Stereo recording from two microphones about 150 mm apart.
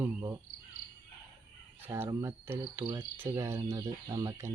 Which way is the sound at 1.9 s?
15° right (ahead or behind).